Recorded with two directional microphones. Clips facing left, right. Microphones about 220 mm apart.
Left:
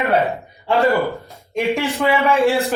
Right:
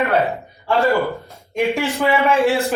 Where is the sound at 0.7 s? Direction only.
15° left (ahead or behind).